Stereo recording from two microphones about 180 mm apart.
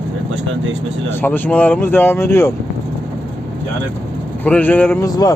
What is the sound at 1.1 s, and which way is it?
Speech, 10° left (ahead or behind).